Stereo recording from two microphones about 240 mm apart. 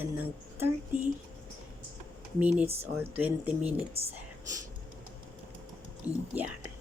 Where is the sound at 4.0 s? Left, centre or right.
Right.